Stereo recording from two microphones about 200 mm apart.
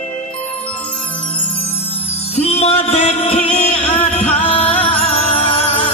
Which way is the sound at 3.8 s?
10° left (ahead or behind).